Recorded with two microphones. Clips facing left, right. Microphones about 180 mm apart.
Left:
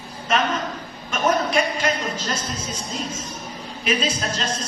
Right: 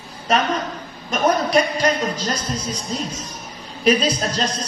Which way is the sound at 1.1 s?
40° right (ahead or behind).